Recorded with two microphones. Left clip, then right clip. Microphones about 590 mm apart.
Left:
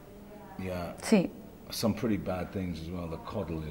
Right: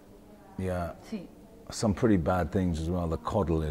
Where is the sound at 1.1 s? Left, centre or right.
Left.